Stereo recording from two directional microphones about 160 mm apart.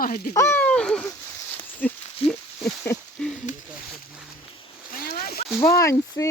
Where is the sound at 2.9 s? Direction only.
20° left (ahead or behind).